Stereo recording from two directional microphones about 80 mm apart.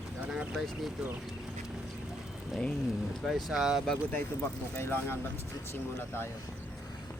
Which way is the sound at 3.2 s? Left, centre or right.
Centre.